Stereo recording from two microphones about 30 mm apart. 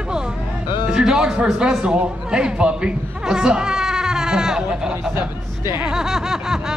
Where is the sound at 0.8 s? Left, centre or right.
Right.